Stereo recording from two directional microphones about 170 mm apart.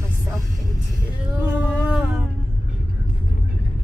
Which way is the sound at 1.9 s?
Centre (ahead or behind).